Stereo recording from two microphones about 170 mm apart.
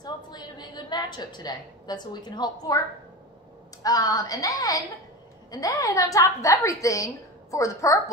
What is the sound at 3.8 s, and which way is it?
A woman's voice, 20° left (ahead or behind).